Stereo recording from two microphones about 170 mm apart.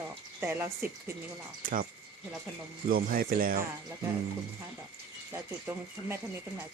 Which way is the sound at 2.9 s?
60° right (ahead or behind).